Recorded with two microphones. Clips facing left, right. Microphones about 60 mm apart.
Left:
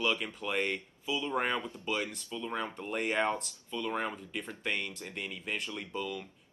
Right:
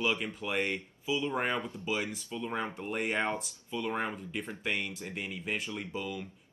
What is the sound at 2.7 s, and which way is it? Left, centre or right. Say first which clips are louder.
Speech: even; centre.